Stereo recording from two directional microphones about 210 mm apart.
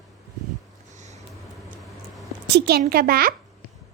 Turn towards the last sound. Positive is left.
turn(degrees=-45)  # may be behind; listen again after turning